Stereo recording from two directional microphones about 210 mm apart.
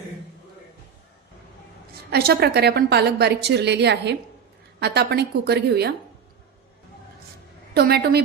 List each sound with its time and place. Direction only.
2.0 s a woman's voice: 50° right (ahead or behind)
7.7 s a woman's voice: 50° right (ahead or behind)